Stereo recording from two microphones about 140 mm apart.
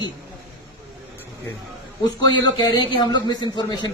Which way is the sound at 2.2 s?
30° left (ahead or behind).